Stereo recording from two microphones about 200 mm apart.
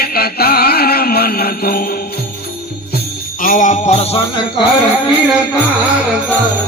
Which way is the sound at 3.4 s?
40° left (ahead or behind).